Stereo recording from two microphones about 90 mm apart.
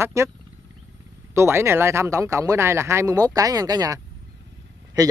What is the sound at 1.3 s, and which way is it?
Speech, 30° right (ahead or behind).